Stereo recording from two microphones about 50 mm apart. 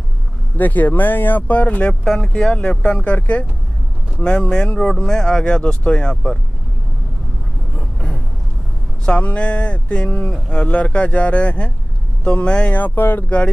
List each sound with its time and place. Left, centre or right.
0.6 s speech: left
1.5 s speech: left
2.0 s speech: centre
7.7 s vehicle: left
9.0 s speech: left
12.7 s speech: left